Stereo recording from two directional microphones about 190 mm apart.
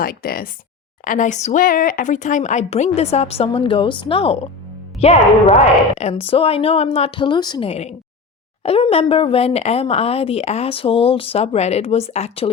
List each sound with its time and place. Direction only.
0.0 s speech: 50° left (ahead or behind); by 12.5 s 35° left (ahead or behind)